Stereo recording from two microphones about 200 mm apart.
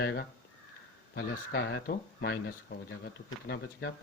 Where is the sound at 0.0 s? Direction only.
55° left (ahead or behind).